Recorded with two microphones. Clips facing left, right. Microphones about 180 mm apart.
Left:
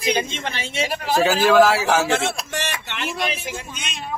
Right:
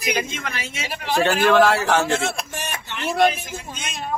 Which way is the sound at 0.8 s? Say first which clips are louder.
Left 2 dB; 40° left (ahead or behind).